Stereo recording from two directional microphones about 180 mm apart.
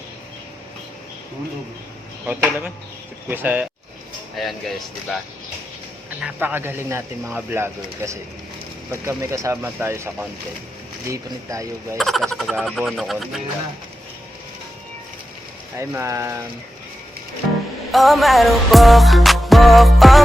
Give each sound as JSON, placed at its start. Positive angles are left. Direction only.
{"t": 2.2, "sound": "speech", "side_deg": -10}
{"t": 4.4, "sound": "music", "side_deg": 0}
{"t": 6.1, "sound": "speech", "side_deg": -10}
{"t": 11.9, "sound": "music", "side_deg": 0}
{"t": 15.8, "sound": "speech", "side_deg": -15}
{"t": 17.9, "sound": "music", "side_deg": 0}